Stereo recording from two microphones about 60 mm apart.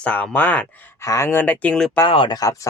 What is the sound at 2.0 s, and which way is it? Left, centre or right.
Speech, left.